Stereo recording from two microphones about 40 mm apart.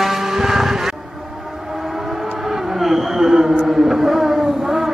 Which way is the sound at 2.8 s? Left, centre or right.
Centre.